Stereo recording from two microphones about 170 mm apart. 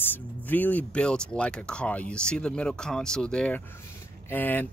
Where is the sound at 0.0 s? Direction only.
10° left (ahead or behind).